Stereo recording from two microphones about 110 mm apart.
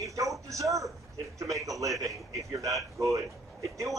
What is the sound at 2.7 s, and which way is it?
Speech, centre (ahead or behind).